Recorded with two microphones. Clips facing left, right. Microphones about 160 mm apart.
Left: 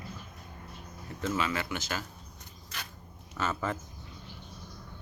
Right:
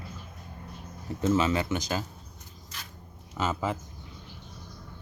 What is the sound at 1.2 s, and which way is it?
Speech, 20° right (ahead or behind).